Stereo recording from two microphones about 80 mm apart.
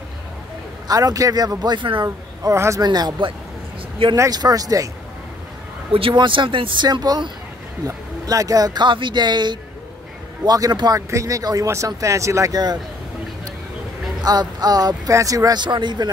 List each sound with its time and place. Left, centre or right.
0.8 s speech: right
2.0 s speech: right
2.8 s speech: right
4.3 s speech: right
6.0 s speech: right
8.8 s speech: right
10.4 s speech: right
11.0 s speech: right
14.2 s speech: right
15.6 s speech: right